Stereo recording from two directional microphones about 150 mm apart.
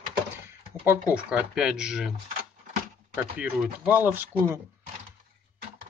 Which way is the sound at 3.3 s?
5° right (ahead or behind).